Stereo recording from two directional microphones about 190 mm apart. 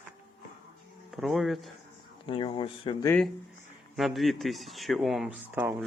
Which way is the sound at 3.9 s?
Centre (ahead or behind).